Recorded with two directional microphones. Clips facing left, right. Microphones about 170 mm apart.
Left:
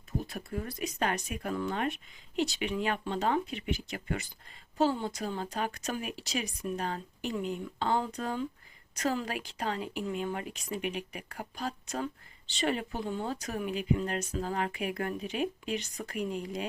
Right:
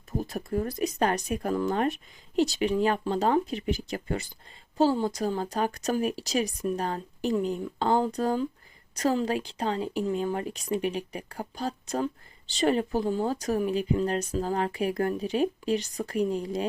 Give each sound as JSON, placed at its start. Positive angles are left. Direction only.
{"t": 0.2, "sound": "speech", "side_deg": -40}